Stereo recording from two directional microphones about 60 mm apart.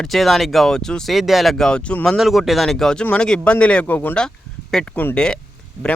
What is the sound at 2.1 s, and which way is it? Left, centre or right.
Speech, centre.